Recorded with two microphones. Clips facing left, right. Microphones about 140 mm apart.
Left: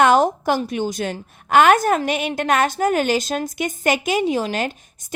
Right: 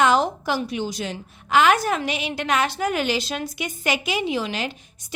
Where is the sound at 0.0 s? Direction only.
50° left (ahead or behind).